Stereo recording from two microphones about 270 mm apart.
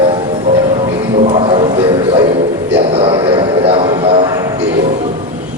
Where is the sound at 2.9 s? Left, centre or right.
Centre.